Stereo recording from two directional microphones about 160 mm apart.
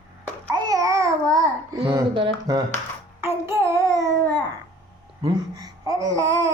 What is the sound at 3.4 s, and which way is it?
Child singing, 15° right (ahead or behind).